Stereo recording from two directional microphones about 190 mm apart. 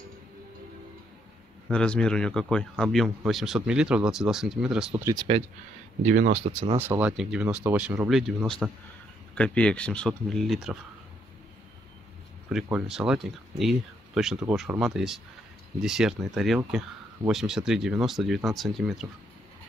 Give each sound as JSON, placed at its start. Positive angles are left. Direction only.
{"t": 1.7, "sound": "speech", "side_deg": 5}
{"t": 5.0, "sound": "speech", "side_deg": -20}
{"t": 6.0, "sound": "speech", "side_deg": -40}
{"t": 6.8, "sound": "speech", "side_deg": -10}
{"t": 12.6, "sound": "speech", "side_deg": -5}